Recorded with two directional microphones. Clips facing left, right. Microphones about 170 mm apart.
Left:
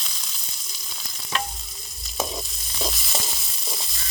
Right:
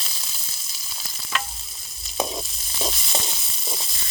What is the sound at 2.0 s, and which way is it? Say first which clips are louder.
Frying: right 2 dB; centre (ahead or behind).